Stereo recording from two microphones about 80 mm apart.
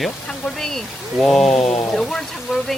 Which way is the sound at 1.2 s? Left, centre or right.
Centre.